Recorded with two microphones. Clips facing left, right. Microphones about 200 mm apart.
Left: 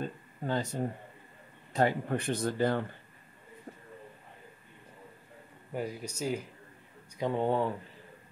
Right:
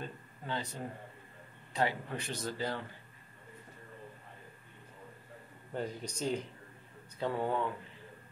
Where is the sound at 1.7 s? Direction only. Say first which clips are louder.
Left 6 dB; 45° left (ahead or behind).